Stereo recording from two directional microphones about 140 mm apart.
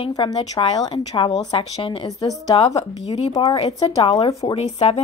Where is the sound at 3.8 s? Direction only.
45° left (ahead or behind).